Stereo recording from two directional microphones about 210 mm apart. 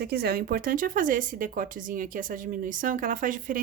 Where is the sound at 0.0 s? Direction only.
50° right (ahead or behind).